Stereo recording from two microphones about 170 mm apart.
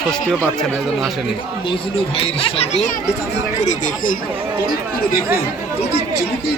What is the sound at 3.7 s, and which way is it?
Speech, 50° left (ahead or behind).